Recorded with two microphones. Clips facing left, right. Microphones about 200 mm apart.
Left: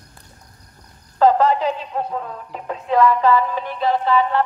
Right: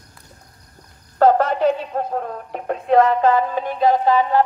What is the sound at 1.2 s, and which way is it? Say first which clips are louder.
Speech: right 1 dB; 55° right (ahead or behind).